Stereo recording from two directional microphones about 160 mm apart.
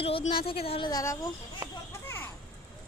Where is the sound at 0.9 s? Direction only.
20° left (ahead or behind).